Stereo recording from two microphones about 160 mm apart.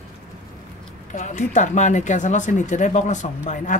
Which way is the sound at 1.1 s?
50° left (ahead or behind).